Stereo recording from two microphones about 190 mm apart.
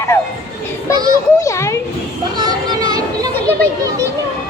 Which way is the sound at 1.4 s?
15° left (ahead or behind).